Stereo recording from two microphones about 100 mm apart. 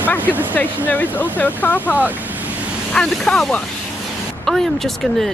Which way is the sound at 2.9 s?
5° left (ahead or behind).